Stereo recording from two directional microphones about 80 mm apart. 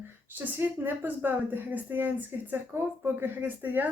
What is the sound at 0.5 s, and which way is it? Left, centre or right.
A woman's voice, right.